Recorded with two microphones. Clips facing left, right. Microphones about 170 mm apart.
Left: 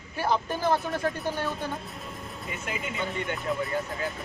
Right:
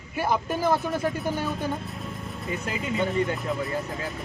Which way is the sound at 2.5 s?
35° right (ahead or behind).